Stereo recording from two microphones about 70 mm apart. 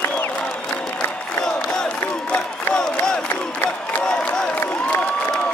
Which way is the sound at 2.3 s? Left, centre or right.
Centre.